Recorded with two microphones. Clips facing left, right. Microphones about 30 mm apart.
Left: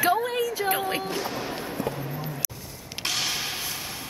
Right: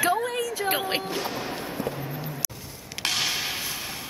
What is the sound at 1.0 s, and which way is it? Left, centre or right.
Music, centre.